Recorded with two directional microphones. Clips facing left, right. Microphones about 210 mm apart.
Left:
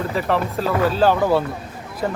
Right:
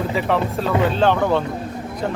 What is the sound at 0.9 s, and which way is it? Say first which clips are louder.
Speech: left 1 dB; 5° left (ahead or behind).